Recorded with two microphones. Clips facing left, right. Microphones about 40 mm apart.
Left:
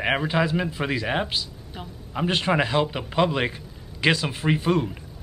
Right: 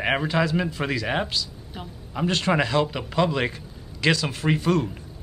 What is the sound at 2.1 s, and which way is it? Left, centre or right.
A man's voice, centre.